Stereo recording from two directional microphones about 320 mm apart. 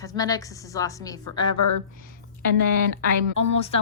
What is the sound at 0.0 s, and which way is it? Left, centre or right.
A woman's voice, centre.